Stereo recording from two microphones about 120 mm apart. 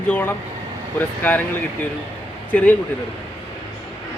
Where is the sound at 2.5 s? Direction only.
10° left (ahead or behind).